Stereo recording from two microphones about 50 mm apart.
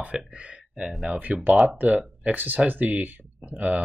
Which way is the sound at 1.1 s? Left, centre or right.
Right.